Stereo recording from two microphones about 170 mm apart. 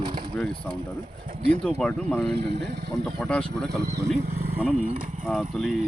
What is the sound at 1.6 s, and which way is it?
Speech, 5° left (ahead or behind).